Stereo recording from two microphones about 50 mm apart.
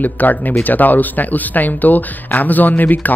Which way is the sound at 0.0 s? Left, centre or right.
Left.